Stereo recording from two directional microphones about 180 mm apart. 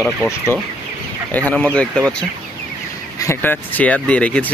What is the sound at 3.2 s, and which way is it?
Speech, 10° left (ahead or behind).